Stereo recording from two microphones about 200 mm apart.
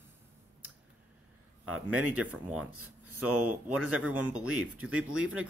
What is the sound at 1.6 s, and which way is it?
Speech, 90° right.